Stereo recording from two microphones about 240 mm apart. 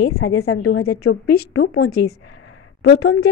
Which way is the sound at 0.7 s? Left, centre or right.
Left.